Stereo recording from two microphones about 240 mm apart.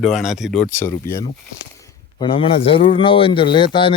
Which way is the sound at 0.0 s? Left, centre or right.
Centre.